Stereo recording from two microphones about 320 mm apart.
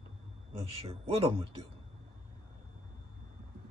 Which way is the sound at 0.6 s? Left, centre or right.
Centre.